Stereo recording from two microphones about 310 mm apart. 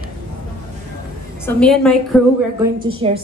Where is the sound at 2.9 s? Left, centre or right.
Centre.